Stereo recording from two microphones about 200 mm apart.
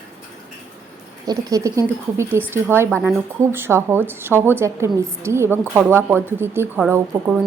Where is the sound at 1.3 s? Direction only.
15° right (ahead or behind).